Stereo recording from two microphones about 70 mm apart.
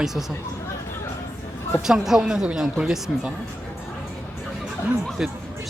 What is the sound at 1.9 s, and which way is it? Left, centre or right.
Speech, centre.